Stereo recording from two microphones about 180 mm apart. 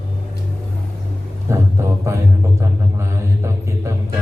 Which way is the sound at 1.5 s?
15° right (ahead or behind).